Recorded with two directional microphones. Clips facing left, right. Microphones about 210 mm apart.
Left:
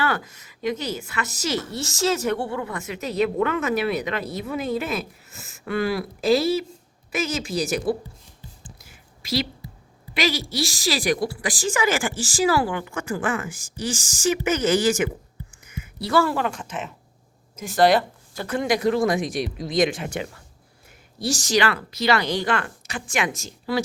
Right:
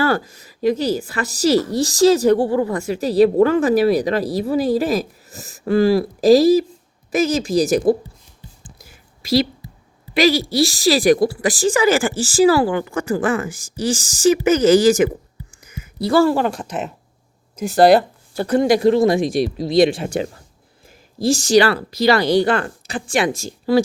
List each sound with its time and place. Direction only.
0.0 s a woman's voice: 35° right (ahead or behind)
8.8 s a sound: 35° right (ahead or behind)
10.2 s a woman's voice: 35° right (ahead or behind)